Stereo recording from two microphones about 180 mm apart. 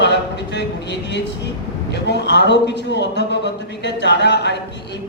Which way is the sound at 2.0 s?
75° left (ahead or behind).